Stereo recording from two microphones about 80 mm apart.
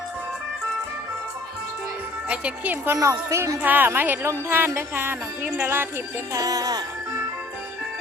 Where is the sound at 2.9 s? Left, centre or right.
Right.